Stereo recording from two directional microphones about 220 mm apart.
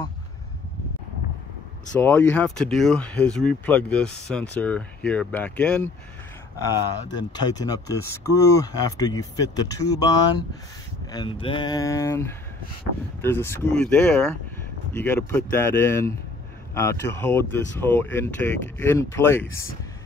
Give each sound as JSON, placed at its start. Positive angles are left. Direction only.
{"t": 2.0, "sound": "speech", "side_deg": 10}
{"t": 6.6, "sound": "speech", "side_deg": 20}